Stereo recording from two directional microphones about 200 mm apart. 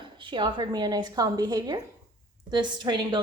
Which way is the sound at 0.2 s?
25° right (ahead or behind).